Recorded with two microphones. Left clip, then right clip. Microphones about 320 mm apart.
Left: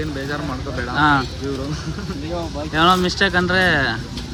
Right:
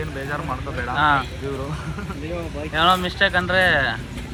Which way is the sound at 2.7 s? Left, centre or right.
Centre.